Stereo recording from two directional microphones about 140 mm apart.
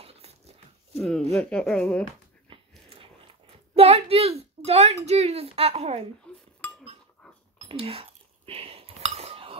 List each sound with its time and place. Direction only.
0.0 s dog: 45° right (ahead or behind)
0.9 s speech: centre (ahead or behind)
2.5 s a sound: 40° right (ahead or behind)
4.6 s a woman's voice: 50° right (ahead or behind)
6.3 s speech: 10° left (ahead or behind)
7.6 s a sound: 45° right (ahead or behind)